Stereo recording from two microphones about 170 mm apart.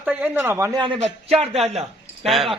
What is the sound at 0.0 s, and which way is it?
Speech, 10° right (ahead or behind).